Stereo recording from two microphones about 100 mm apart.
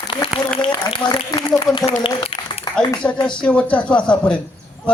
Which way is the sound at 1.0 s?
45° left (ahead or behind).